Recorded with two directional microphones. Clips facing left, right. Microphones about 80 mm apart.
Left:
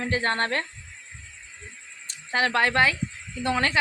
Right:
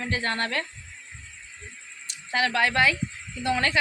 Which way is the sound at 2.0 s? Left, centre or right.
Left.